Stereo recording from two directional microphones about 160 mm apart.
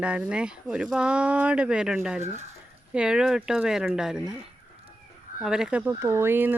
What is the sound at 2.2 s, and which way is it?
Speech, 45° right (ahead or behind).